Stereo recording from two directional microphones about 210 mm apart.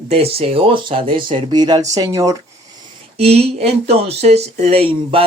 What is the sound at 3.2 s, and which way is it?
Speech, 30° right (ahead or behind).